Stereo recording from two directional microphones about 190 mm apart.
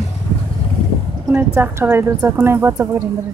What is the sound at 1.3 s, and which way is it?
A woman's voice, 10° right (ahead or behind).